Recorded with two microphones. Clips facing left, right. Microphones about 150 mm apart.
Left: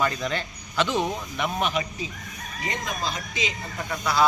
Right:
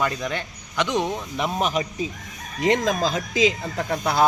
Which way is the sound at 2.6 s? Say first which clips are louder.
Right 12 dB; 90° right.